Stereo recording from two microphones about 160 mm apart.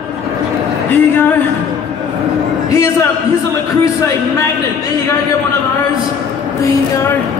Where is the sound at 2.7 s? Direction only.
20° left (ahead or behind).